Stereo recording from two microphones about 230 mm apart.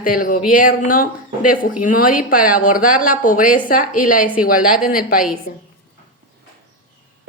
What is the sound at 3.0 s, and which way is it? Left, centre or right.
A woman's voice, left.